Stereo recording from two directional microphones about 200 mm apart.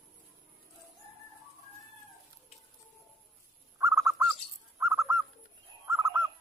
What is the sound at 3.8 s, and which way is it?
Bird, 15° right (ahead or behind).